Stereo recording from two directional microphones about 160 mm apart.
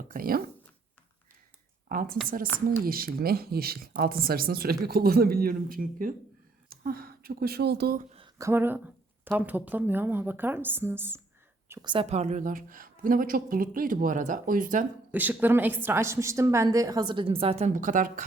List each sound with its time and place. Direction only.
0.1 s speech: 65° right (ahead or behind)
1.9 s a woman's voice: 65° right (ahead or behind); by 8.0 s 80° right
8.4 s speech: 15° right (ahead or behind)
11.7 s a woman's voice: 25° right (ahead or behind)
12.0 s speech: 45° right (ahead or behind)
15.1 s a woman's voice: 10° right (ahead or behind); by 17.7 s 40° right (ahead or behind)
17.7 s speech: 55° right (ahead or behind)